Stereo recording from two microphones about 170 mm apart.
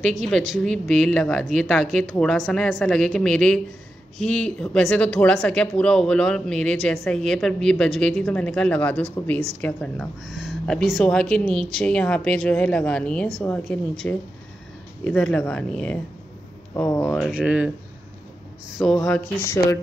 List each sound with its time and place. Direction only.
0.2 s speech: centre (ahead or behind)
17.1 s speech: 5° right (ahead or behind)
18.8 s speech: 5° left (ahead or behind)
19.4 s speech: 15° left (ahead or behind)